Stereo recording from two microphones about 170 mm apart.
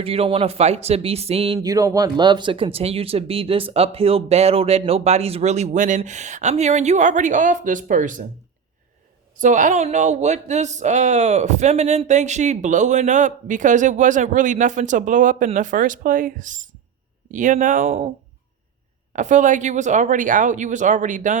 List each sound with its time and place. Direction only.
0.0 s speech: 35° right (ahead or behind)
1.5 s speech: 20° right (ahead or behind); by 8.2 s 50° right (ahead or behind)
9.3 s speech: 50° right (ahead or behind)
19.1 s speech: 45° right (ahead or behind)